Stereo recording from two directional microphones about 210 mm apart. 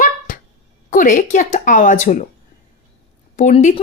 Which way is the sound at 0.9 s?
40° left (ahead or behind).